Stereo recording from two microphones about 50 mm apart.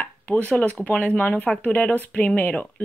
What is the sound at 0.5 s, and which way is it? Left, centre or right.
Speech, left.